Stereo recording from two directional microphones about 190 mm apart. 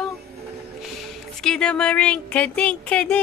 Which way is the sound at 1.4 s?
5° left (ahead or behind).